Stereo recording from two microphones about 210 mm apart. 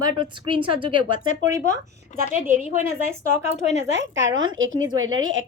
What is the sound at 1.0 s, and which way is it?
Speech, 85° right.